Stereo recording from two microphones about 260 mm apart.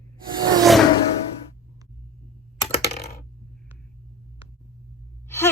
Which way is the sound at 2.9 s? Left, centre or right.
Left.